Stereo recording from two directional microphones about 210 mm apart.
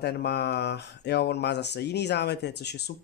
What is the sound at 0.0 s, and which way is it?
Speech, 50° left (ahead or behind).